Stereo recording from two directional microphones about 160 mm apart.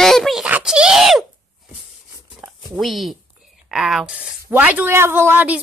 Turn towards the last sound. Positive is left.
turn(degrees=-10)  # may be behind; listen again after turning